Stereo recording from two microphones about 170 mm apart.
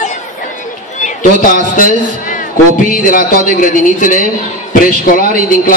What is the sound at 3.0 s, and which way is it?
A man's voice, 55° left (ahead or behind).